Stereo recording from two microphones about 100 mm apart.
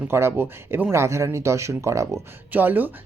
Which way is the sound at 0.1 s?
25° right (ahead or behind).